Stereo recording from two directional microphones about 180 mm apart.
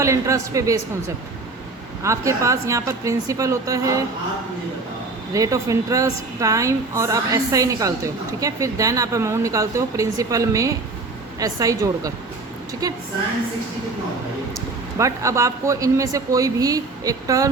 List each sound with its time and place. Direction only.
0.0 s a woman's voice: 15° right (ahead or behind)
5.3 s a woman's voice: 20° right (ahead or behind)
14.9 s a woman's voice: 15° right (ahead or behind)